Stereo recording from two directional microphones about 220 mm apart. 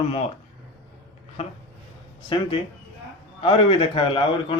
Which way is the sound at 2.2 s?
25° left (ahead or behind).